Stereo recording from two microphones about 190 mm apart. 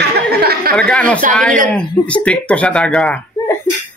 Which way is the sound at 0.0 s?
55° right (ahead or behind).